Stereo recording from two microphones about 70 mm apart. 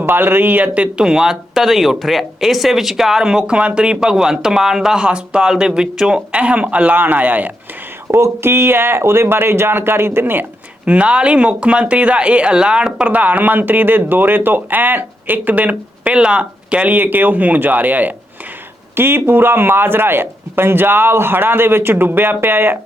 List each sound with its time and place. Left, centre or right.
0.0 s speech: right
8.0 s speech: right
10.8 s speech: centre